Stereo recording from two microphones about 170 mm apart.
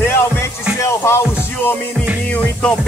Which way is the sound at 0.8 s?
15° left (ahead or behind).